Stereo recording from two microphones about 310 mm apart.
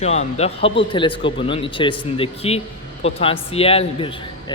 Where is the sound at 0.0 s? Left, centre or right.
Left.